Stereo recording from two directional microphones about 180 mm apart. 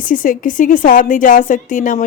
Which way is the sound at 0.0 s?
50° left (ahead or behind).